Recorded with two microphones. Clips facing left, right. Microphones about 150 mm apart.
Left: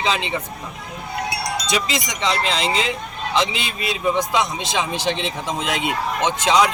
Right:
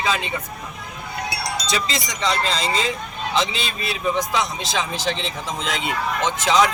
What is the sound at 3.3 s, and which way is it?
Speech, 20° left (ahead or behind).